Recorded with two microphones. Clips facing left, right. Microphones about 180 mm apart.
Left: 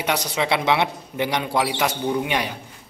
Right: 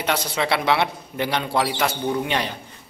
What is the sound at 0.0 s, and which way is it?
A man's voice, 15° left (ahead or behind).